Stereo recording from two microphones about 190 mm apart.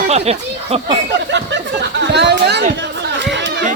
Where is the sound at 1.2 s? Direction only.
70° right (ahead or behind).